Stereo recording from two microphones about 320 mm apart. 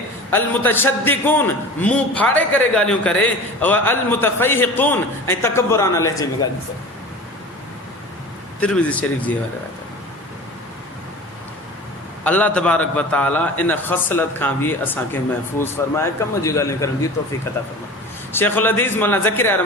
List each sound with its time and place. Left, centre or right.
0.3 s a man's voice: centre
8.6 s a man's voice: centre
12.2 s a man's voice: centre
18.3 s a man's voice: centre